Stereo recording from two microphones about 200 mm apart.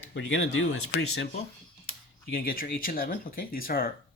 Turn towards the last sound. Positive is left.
turn(degrees=45)  # may be behind; listen again after turning